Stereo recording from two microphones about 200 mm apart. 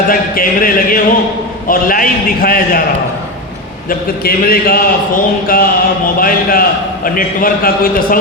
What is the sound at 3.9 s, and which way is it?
A man's voice, 45° left (ahead or behind).